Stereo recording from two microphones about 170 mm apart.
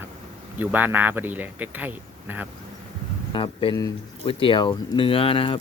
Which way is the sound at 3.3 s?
30° left (ahead or behind).